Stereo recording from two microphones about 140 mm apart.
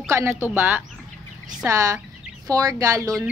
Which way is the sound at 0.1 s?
20° right (ahead or behind).